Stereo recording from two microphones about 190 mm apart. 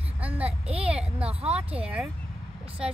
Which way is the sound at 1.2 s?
30° right (ahead or behind).